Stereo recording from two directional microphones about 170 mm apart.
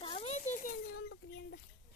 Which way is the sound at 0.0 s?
35° left (ahead or behind).